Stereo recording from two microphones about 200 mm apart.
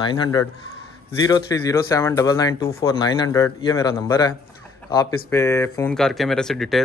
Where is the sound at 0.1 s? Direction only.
20° left (ahead or behind).